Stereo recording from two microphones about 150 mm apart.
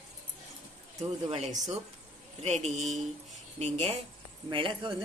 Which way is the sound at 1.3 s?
45° right (ahead or behind).